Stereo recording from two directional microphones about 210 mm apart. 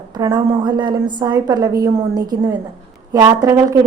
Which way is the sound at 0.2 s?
20° right (ahead or behind).